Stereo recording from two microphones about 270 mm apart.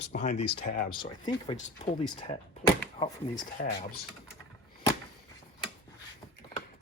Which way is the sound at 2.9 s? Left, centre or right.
Centre.